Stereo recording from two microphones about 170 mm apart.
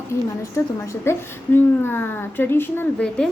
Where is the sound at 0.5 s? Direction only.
15° left (ahead or behind).